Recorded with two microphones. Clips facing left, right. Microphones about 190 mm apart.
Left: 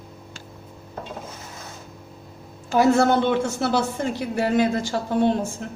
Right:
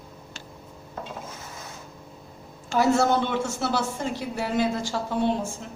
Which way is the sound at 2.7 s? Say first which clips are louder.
Left 4 dB; 55° left (ahead or behind).